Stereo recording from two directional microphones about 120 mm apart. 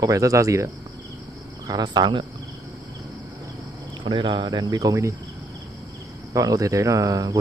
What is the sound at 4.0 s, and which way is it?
Speech, 40° right (ahead or behind).